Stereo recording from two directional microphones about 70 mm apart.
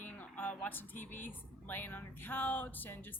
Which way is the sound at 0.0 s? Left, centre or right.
Left.